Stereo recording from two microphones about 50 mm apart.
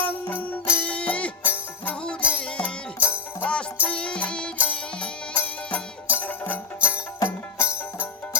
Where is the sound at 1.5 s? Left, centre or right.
Left.